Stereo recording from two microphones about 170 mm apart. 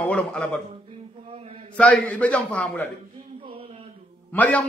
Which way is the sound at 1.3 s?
35° right (ahead or behind).